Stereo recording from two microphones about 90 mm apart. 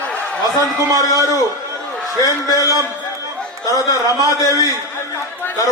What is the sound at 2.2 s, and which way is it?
Speech, 40° left (ahead or behind).